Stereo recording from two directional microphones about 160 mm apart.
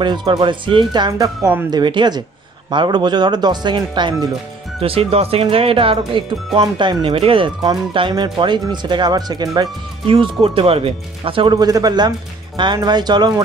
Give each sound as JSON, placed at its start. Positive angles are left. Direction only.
{"t": 0.0, "sound": "speech", "side_deg": -30}